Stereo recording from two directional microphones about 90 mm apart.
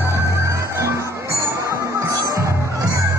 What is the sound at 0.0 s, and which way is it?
Music, 35° right (ahead or behind).